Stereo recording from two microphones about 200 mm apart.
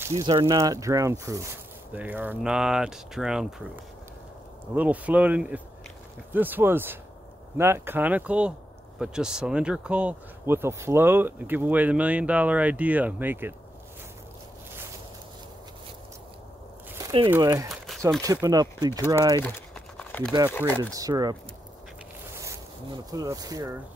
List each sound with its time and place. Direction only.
0.0 s speech: 15° right (ahead or behind); by 3.6 s centre (ahead or behind)
4.7 s speech: 5° right (ahead or behind)
17.0 s a sound: 25° right (ahead or behind)
17.3 s speech: 15° right (ahead or behind)
17.6 s a sound: centre (ahead or behind)
18.2 s speech: 15° right (ahead or behind)
19.4 s typing: 5° left (ahead or behind)
20.5 s speech: 10° left (ahead or behind)
20.9 s speech: 20° right (ahead or behind)
22.3 s zipper: 15° right (ahead or behind)
23.1 s speech: 20° right (ahead or behind)